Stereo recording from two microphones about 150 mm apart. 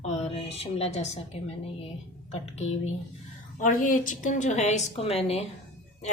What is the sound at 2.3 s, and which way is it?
Speech, 45° left (ahead or behind).